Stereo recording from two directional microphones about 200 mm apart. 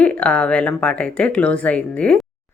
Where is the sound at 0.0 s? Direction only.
5° left (ahead or behind).